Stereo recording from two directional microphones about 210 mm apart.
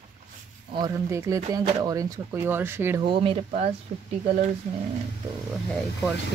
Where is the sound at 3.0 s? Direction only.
25° right (ahead or behind).